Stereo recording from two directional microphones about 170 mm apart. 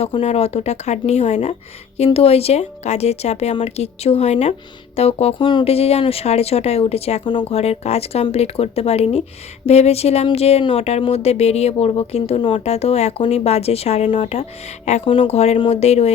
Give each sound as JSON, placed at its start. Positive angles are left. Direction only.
{"t": 0.0, "sound": "speech", "side_deg": 35}